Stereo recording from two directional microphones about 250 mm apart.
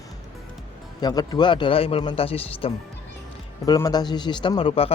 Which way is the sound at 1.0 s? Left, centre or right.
Centre.